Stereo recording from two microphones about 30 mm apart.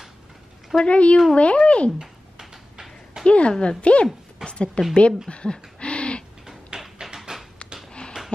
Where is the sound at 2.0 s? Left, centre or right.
Centre.